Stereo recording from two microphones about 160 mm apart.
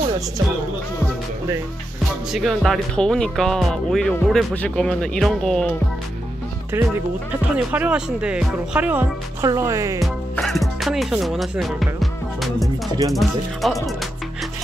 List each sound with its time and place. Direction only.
2.3 s speech: centre (ahead or behind)
6.7 s speech: 15° right (ahead or behind)
9.5 s music: 20° right (ahead or behind)
10.4 s speech: centre (ahead or behind)